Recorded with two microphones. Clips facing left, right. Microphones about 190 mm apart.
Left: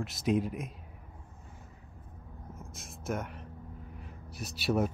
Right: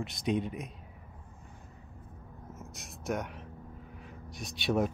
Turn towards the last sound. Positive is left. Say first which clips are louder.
# even
turn(degrees=5)  # may be behind; listen again after turning